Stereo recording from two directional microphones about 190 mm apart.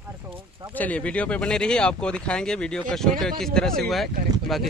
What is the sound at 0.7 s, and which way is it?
Speech, 5° left (ahead or behind).